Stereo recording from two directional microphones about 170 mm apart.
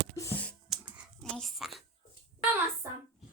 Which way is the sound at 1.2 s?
Centre (ahead or behind).